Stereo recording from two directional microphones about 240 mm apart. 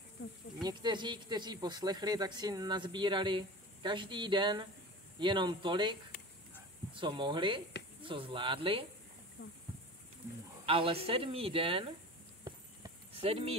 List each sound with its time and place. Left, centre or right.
0.6 s speech: centre
9.4 s speech: left
10.6 s speech: right
12.4 s a sound: right